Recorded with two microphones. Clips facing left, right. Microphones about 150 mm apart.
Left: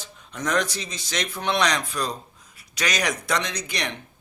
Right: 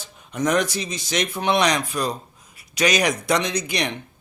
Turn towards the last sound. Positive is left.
turn(degrees=-15)  # may be behind; listen again after turning